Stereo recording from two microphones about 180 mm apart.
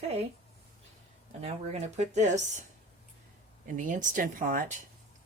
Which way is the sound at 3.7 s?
45° right (ahead or behind).